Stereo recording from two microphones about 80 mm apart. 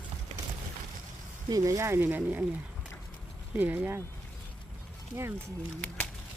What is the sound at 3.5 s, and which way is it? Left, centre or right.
Speech, right.